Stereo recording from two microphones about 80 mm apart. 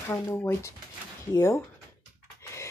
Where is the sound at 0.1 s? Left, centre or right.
Left.